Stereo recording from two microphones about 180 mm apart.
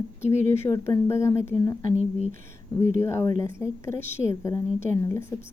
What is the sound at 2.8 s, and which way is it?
A woman's voice, 15° left (ahead or behind).